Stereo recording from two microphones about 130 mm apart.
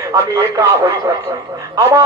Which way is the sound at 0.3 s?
25° right (ahead or behind).